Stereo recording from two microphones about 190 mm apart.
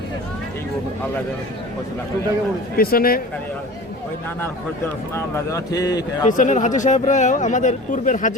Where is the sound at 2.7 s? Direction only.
50° left (ahead or behind).